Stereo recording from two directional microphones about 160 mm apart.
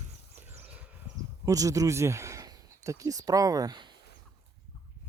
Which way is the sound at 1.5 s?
20° right (ahead or behind).